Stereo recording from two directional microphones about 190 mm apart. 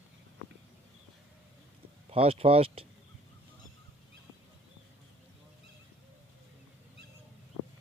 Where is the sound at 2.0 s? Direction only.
30° right (ahead or behind).